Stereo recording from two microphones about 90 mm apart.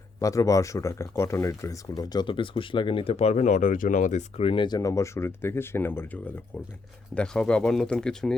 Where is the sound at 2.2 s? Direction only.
70° left (ahead or behind).